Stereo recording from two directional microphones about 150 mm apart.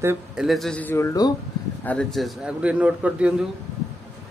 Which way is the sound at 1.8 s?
5° left (ahead or behind).